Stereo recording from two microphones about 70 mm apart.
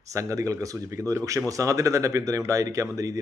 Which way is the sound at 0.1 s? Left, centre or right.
Right.